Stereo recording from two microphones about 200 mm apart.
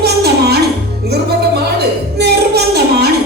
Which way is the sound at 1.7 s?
55° right (ahead or behind).